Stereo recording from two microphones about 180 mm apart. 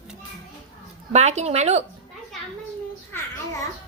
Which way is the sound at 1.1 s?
40° right (ahead or behind).